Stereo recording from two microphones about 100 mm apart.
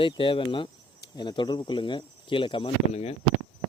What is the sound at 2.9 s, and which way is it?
Speech, 90° left.